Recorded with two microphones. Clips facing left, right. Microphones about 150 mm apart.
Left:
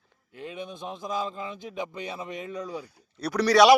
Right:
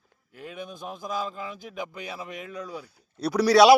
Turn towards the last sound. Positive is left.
turn(degrees=-10)  # may be behind; listen again after turning